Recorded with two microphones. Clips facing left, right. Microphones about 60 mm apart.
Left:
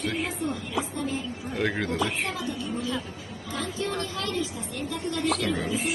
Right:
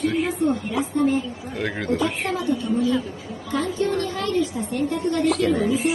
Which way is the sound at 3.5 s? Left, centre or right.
Right.